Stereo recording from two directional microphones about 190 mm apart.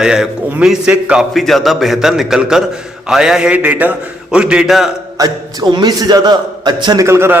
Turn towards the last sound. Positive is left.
turn(degrees=-15)  # may be behind; listen again after turning